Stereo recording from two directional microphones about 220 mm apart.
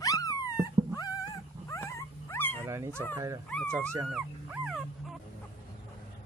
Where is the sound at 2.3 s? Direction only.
10° left (ahead or behind).